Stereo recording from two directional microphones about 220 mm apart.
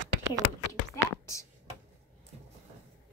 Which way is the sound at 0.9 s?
15° left (ahead or behind).